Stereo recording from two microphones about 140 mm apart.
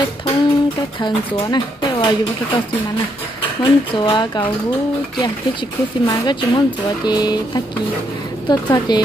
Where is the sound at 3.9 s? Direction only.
35° left (ahead or behind).